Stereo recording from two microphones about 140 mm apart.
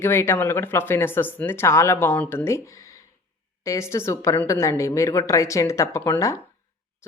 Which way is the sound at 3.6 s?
20° left (ahead or behind).